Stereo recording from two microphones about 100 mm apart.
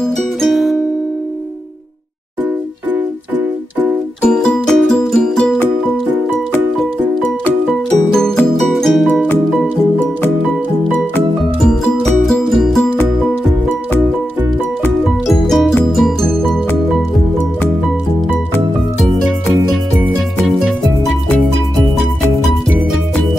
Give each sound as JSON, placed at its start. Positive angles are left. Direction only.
{"t": 0.0, "sound": "music", "side_deg": 0}
{"t": 4.2, "sound": "music", "side_deg": 10}
{"t": 8.1, "sound": "music", "side_deg": 5}
{"t": 11.6, "sound": "music", "side_deg": 5}
{"t": 15.2, "sound": "music", "side_deg": 0}